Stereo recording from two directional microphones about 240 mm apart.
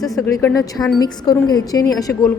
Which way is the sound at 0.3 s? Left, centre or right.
Centre.